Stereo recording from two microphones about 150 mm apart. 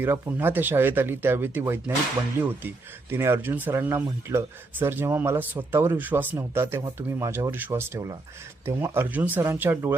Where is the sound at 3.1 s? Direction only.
15° right (ahead or behind).